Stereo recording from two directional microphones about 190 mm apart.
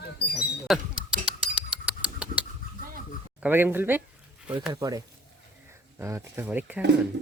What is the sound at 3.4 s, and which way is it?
Speech, 10° right (ahead or behind).